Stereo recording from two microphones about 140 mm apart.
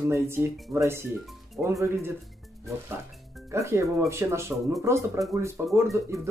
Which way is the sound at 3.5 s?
20° right (ahead or behind).